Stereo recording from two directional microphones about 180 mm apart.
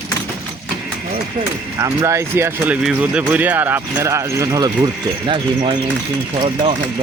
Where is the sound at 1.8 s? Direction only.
15° right (ahead or behind).